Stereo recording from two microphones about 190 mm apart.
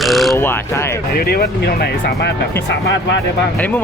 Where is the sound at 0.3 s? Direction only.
10° left (ahead or behind).